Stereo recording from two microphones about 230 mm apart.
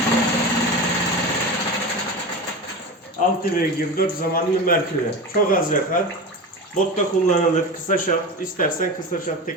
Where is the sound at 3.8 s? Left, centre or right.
Left.